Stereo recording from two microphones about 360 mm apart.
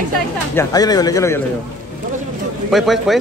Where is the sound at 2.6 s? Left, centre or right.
Centre.